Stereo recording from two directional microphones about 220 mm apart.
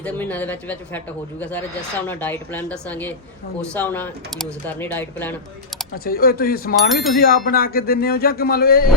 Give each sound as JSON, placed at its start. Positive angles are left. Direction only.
{"t": 0.0, "sound": "speech", "side_deg": 5}
{"t": 5.9, "sound": "speech", "side_deg": 45}
{"t": 6.7, "sound": "a sound", "side_deg": 0}
{"t": 7.2, "sound": "speech", "side_deg": 40}